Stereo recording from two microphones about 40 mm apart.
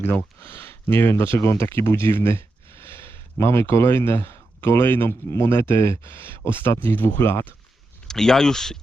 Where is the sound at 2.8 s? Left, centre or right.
Left.